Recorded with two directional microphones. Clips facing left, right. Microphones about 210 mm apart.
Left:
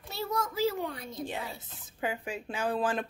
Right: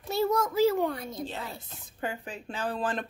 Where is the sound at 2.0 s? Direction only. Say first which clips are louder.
Left 1 dB; 10° left (ahead or behind).